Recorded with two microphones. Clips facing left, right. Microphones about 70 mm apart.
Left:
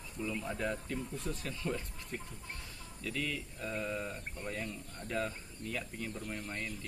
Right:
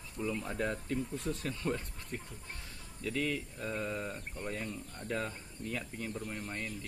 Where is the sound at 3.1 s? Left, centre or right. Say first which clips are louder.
Right 4 dB; right.